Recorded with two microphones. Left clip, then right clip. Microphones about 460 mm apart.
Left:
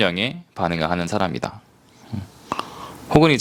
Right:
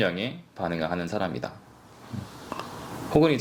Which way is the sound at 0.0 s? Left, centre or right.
Left.